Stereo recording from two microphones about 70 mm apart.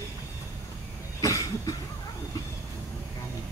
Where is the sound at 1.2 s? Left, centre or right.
Left.